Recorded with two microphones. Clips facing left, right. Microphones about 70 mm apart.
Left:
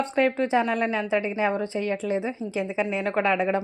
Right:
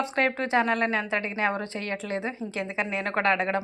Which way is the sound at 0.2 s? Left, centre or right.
Centre.